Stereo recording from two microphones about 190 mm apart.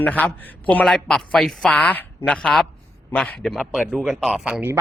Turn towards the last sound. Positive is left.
turn(degrees=-10)  # may be behind; listen again after turning